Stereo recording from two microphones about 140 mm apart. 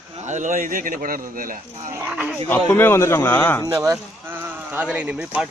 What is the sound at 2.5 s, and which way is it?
Speech, 15° left (ahead or behind).